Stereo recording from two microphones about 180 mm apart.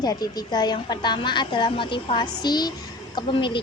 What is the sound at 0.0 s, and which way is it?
A woman's voice, 20° left (ahead or behind).